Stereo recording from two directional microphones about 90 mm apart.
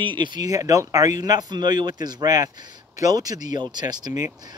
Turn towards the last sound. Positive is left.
turn(degrees=-50)  # may be behind; listen again after turning